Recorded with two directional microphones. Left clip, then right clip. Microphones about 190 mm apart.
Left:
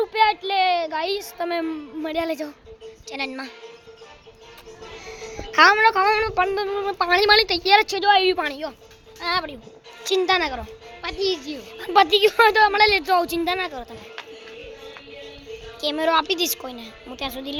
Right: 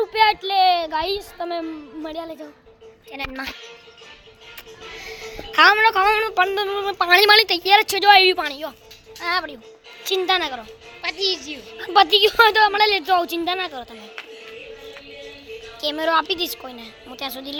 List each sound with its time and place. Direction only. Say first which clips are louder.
0.0 s child singing: right 2 dB; 5° right (ahead or behind)
0.5 s a sound: right 3 dB; centre (ahead or behind)
1.4 s a woman's voice: left 1 dB; 10° left (ahead or behind)
2.2 s speech: left 7 dB; 50° left (ahead or behind)
3.1 s a woman's voice: left 1 dB; 5° left (ahead or behind)
5.2 s a woman's voice: right 1 dB; 5° left (ahead or behind)
7.9 s a woman's voice: right 4 dB; 10° right (ahead or behind)
8.4 s speech: even; 20° left (ahead or behind)
9.2 s a woman's voice: right 1 dB; 5° left (ahead or behind)
11.0 s speech: right 2 dB; 55° left (ahead or behind)
11.8 s a woman's voice: right 1 dB; 5° left (ahead or behind)
15.8 s a woman's voice: even; 10° left (ahead or behind)